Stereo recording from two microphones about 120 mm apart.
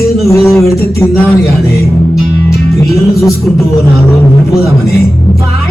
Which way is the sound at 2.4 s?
25° left (ahead or behind).